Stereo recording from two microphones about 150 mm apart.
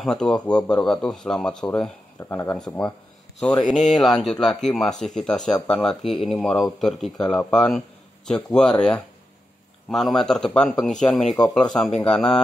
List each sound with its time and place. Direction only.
0.0 s speech: centre (ahead or behind)
1.7 s speech: 15° left (ahead or behind)
3.7 s speech: centre (ahead or behind)